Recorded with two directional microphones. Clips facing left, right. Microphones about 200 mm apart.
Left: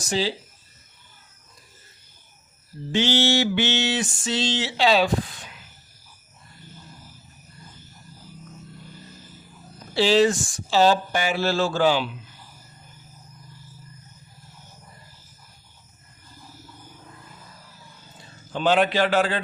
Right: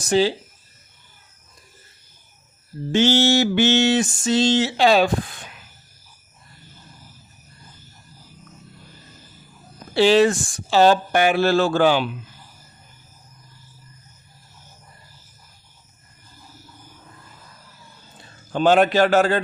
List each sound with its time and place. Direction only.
0.0 s mantra: 55° right (ahead or behind)
2.9 s mantra: 45° right (ahead or behind)
9.9 s speech: 60° right (ahead or behind)
18.5 s mantra: 45° right (ahead or behind)